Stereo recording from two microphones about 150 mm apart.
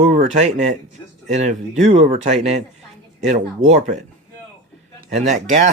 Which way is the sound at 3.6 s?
50° right (ahead or behind).